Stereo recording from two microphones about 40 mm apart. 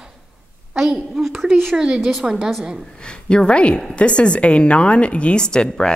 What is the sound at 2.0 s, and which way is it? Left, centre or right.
Speech, centre.